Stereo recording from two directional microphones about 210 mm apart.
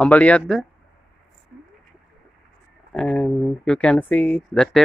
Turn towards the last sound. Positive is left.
turn(degrees=5)  # may be behind; listen again after turning